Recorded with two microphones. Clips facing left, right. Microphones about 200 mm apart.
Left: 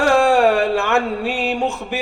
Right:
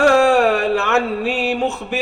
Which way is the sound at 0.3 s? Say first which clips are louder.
Even; 15° left (ahead or behind).